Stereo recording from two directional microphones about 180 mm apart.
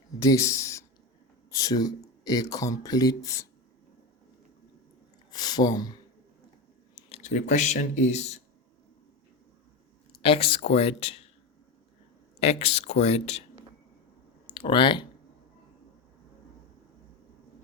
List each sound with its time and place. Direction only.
0.2 s speech: 15° left (ahead or behind)
5.3 s speech: 25° left (ahead or behind)
6.9 s speech: 35° left (ahead or behind)
10.2 s speech: 30° left (ahead or behind)
12.4 s speech: 35° left (ahead or behind)
14.4 s speech: 25° left (ahead or behind)